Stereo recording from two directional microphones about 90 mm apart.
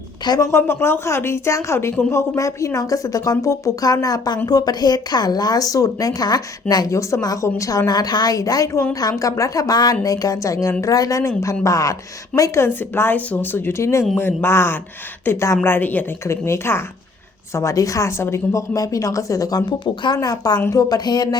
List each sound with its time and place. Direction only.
0.3 s speech: 40° left (ahead or behind)
19.8 s speech: 65° left (ahead or behind)
20.1 s speech: 45° left (ahead or behind)